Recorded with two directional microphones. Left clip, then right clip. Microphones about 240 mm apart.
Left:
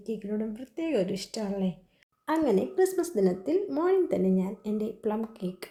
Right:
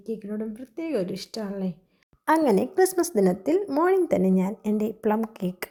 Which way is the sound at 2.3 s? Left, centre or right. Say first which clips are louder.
Right 5 dB; right.